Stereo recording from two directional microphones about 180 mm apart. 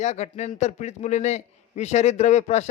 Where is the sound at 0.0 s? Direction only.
40° left (ahead or behind).